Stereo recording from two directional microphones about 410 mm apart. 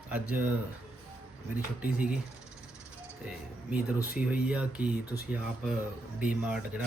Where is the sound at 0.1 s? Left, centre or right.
Centre.